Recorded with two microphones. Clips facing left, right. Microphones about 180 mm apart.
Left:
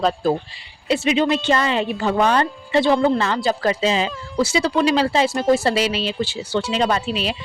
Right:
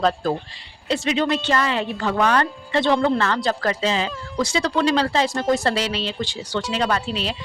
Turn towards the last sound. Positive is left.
turn(degrees=15)  # may be behind; listen again after turning